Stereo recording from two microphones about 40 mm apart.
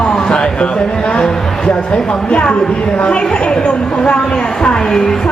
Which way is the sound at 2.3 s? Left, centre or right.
Left.